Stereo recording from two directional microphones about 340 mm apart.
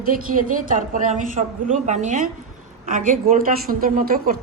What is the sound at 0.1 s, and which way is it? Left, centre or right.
A woman's voice, right.